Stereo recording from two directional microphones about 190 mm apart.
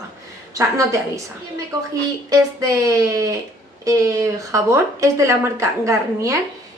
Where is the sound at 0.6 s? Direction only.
15° right (ahead or behind).